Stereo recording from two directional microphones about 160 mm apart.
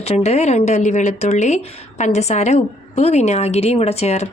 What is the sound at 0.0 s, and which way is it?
Speech, 40° left (ahead or behind).